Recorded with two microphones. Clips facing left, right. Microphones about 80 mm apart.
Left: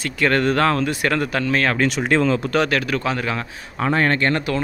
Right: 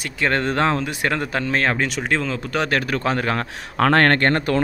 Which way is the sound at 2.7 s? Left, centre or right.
Right.